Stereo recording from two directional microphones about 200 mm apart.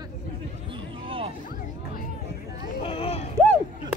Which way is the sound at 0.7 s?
25° right (ahead or behind).